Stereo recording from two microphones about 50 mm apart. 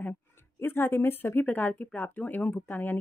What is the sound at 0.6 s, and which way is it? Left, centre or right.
Speech, left.